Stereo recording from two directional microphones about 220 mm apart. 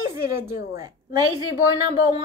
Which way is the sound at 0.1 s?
10° right (ahead or behind).